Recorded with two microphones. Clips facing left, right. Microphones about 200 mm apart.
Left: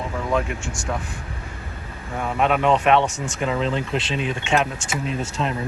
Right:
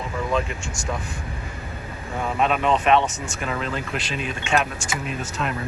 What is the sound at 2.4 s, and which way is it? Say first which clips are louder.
Speech: left 3 dB; 15° left (ahead or behind).